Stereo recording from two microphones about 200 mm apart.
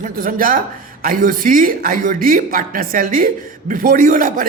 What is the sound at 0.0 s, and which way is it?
Speech, 45° right (ahead or behind).